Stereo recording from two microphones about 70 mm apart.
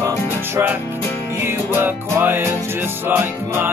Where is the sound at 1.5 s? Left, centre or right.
Right.